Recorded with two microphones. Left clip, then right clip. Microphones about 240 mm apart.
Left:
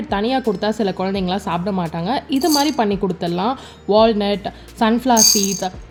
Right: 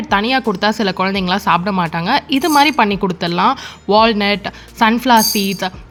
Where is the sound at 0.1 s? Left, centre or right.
Centre.